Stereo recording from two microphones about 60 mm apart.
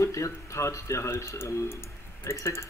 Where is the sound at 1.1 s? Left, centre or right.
Left.